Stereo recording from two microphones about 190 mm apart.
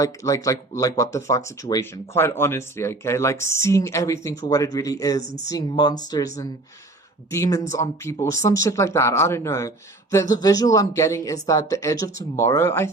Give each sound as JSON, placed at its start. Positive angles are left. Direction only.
{"t": 0.0, "sound": "speech", "side_deg": 15}